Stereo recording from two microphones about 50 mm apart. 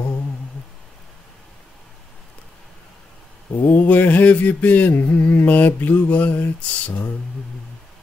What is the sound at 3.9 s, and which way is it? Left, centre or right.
Mantra, left.